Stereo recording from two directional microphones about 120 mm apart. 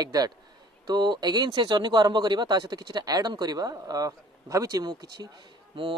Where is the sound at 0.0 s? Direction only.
30° right (ahead or behind).